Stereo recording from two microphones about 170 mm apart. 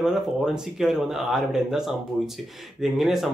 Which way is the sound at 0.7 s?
5° right (ahead or behind).